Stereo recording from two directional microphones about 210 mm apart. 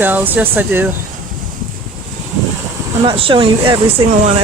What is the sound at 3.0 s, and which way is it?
Speech, 25° right (ahead or behind).